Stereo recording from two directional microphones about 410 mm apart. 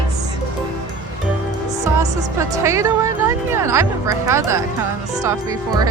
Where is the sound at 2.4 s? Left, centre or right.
Centre.